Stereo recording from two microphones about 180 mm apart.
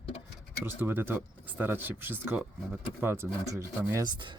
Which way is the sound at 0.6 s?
10° right (ahead or behind).